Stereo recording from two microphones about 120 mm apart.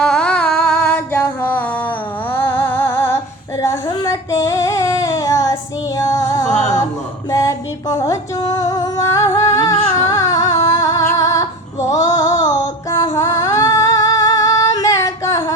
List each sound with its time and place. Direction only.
0.0 s humming: 5° left (ahead or behind)
0.9 s a sound: 20° left (ahead or behind)
2.3 s music: 20° left (ahead or behind)
4.0 s female singing: 25° left (ahead or behind)
6.0 s music: 25° left (ahead or behind)